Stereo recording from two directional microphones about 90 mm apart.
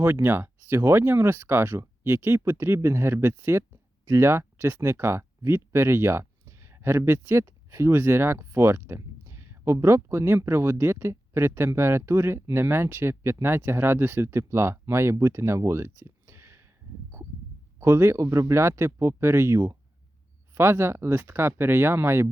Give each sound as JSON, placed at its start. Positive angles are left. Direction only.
{"t": 0.0, "sound": "speech", "side_deg": -25}
{"t": 17.7, "sound": "speech", "side_deg": -30}